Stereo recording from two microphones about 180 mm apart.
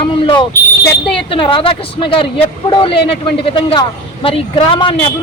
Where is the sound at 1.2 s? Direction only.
30° left (ahead or behind).